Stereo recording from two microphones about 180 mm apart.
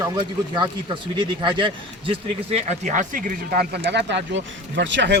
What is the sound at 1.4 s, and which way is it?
Speech, 25° right (ahead or behind).